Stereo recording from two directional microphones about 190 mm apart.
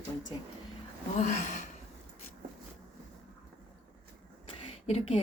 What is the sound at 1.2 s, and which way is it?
Speech, 40° left (ahead or behind).